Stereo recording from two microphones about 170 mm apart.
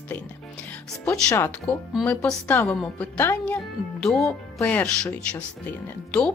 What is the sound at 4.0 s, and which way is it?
Speech, centre (ahead or behind).